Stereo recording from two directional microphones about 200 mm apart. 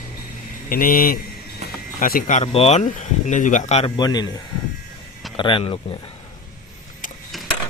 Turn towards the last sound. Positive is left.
turn(degrees=0)  # may be behind; listen again after turning